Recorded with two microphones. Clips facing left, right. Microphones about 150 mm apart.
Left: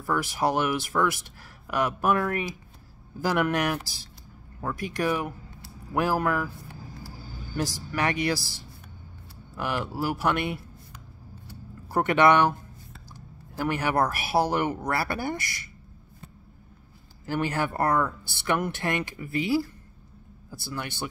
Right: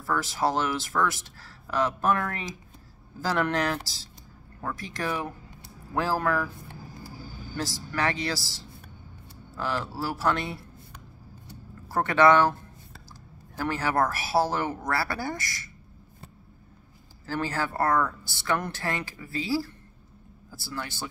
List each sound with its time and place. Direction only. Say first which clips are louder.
0.0 s speech: left 1 dB; 15° left (ahead or behind)
7.5 s speech: left 2 dB; 15° left (ahead or behind)
9.6 s speech: left 1 dB; 15° left (ahead or behind)
11.9 s speech: even; 15° left (ahead or behind)
17.3 s speech: left 2 dB; 20° left (ahead or behind)